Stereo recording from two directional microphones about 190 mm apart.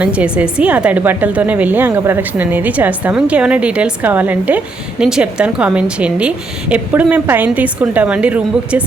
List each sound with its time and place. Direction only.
0.0 s a woman's voice: 5° right (ahead or behind)